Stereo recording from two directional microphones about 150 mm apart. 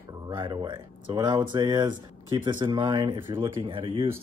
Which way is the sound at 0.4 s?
30° right (ahead or behind).